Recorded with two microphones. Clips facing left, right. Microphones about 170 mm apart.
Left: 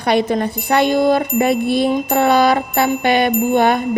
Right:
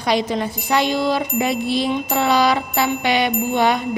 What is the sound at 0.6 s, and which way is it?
Music, 55° left (ahead or behind).